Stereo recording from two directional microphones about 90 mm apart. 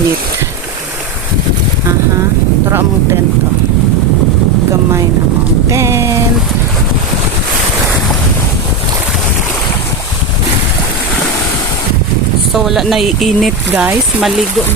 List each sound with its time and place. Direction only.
2.6 s speech: 25° right (ahead or behind)
5.6 s a sound: 30° right (ahead or behind)
12.5 s speech: centre (ahead or behind)